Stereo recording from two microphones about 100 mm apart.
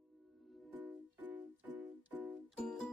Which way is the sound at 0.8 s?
15° right (ahead or behind).